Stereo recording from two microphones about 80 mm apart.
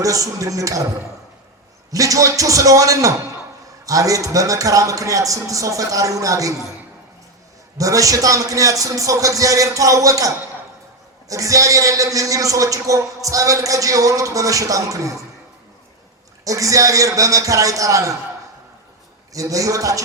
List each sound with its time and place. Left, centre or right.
0.0 s a man's voice: right
1.9 s a man's voice: right
7.8 s a man's voice: right
16.4 s a man's voice: right
19.3 s a man's voice: right